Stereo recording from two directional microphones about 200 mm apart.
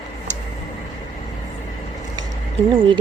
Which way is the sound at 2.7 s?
25° right (ahead or behind).